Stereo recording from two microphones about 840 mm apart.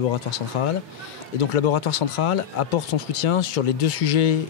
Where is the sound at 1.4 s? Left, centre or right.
Left.